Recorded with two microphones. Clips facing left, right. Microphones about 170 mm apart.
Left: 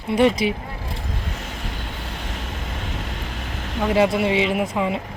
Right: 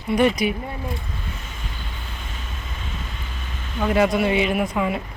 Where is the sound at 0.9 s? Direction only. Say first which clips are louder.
Even; 80° left.